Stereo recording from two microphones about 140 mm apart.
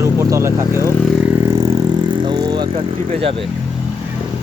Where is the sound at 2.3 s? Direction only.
35° right (ahead or behind).